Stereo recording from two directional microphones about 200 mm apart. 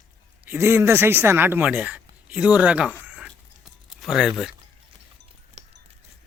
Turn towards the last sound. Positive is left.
turn(degrees=-35)  # may be behind; listen again after turning